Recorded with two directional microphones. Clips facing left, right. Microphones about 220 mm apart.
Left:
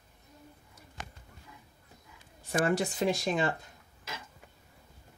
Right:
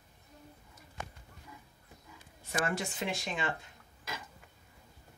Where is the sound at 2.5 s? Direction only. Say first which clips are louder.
Left 6 dB; 35° left (ahead or behind).